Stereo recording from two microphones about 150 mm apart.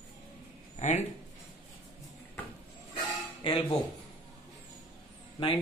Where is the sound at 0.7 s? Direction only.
50° left (ahead or behind).